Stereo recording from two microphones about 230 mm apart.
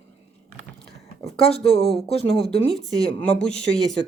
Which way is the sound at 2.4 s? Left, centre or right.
Centre.